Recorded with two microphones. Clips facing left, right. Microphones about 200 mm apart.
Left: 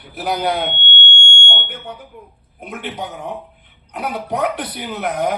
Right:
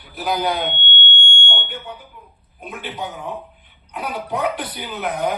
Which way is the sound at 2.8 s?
75° left (ahead or behind).